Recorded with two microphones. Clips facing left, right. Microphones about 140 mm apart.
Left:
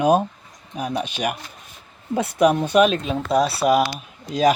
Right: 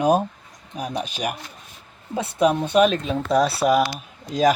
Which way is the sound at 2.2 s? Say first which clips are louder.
Left 2 dB; 25° right (ahead or behind).